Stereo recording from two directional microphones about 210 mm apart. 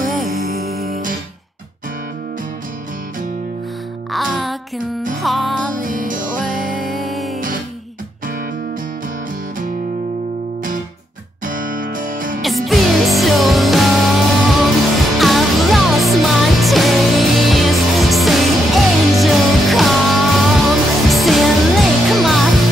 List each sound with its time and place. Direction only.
0.0 s music: centre (ahead or behind)
0.4 s music: 45° right (ahead or behind)
4.1 s music: centre (ahead or behind)
5.8 s music: 40° right (ahead or behind)
6.8 s music: centre (ahead or behind)
11.4 s music: 40° right (ahead or behind)
12.4 s music: centre (ahead or behind)